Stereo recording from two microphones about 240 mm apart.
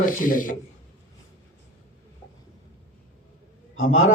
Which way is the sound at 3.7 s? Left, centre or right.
Left.